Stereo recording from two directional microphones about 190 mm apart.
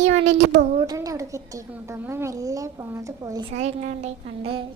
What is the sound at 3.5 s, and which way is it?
A woman's voice, 35° right (ahead or behind).